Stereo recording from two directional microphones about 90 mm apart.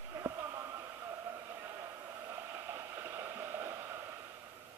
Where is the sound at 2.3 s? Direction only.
30° right (ahead or behind).